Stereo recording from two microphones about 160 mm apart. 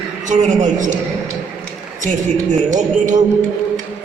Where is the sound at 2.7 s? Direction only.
50° right (ahead or behind).